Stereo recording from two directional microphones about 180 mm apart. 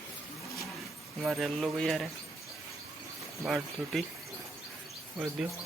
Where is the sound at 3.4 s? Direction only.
Centre (ahead or behind).